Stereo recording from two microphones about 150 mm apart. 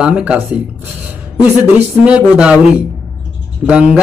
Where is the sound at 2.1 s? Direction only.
5° right (ahead or behind).